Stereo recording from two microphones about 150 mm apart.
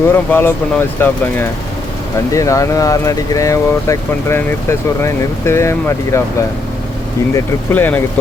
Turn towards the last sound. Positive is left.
turn(degrees=15)  # may be behind; listen again after turning